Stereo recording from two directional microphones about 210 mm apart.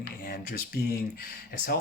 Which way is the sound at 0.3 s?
45° left (ahead or behind).